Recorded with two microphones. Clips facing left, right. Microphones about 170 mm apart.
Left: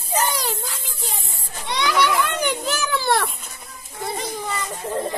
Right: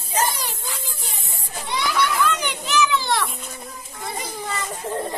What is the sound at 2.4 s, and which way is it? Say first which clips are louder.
Children playing: right 2 dB; 45° left (ahead or behind).